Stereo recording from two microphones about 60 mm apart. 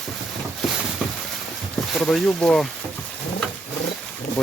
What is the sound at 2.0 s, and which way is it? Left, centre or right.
Speech, centre.